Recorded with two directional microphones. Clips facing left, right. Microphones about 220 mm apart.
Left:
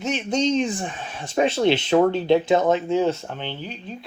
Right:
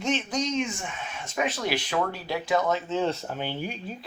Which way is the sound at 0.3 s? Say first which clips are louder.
Left 7 dB; 30° left (ahead or behind).